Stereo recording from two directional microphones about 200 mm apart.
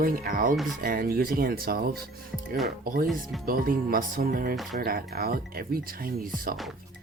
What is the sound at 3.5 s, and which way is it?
Speech, 45° right (ahead or behind).